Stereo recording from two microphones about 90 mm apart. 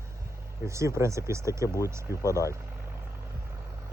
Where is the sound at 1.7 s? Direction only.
35° left (ahead or behind).